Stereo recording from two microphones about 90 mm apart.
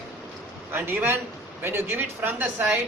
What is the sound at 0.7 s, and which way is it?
A man's voice, 25° right (ahead or behind).